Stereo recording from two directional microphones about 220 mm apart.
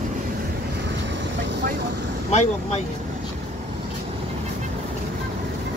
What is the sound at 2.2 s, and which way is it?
Vehicle, 30° left (ahead or behind).